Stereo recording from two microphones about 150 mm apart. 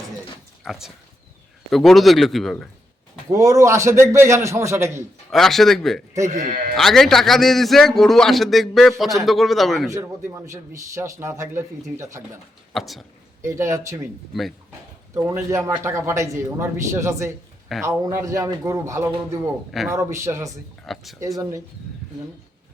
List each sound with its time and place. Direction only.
0.6 s a man's voice: centre (ahead or behind)
3.2 s a man's voice: 20° right (ahead or behind)
5.3 s a man's voice: centre (ahead or behind)
6.2 s speech: 55° right (ahead or behind)
6.7 s a man's voice: centre (ahead or behind)
9.9 s a man's voice: 20° right (ahead or behind)
12.7 s a man's voice: centre (ahead or behind)
13.4 s a man's voice: 20° right (ahead or behind)
15.1 s a man's voice: 20° right (ahead or behind)
20.8 s a man's voice: centre (ahead or behind)
21.2 s a man's voice: 20° right (ahead or behind)